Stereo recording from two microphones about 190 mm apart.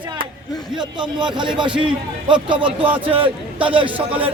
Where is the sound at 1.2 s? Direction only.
25° right (ahead or behind).